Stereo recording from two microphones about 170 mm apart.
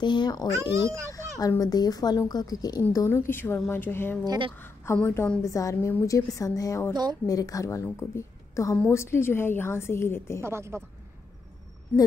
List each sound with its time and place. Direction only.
0.0 s a woman's voice: 25° left (ahead or behind)
0.6 s a woman's voice: 15° right (ahead or behind)
1.1 s a woman's voice: 20° left (ahead or behind)
4.2 s speech: 25° right (ahead or behind)
4.6 s a woman's voice: 10° left (ahead or behind)
6.9 s speech: 25° right (ahead or behind)
7.2 s a woman's voice: 20° left (ahead or behind)
10.4 s a woman's voice: 15° right (ahead or behind)